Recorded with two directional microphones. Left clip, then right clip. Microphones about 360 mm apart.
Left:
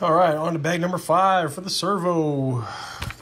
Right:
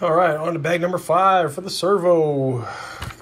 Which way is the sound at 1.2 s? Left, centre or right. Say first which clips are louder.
Right 3 dB; left.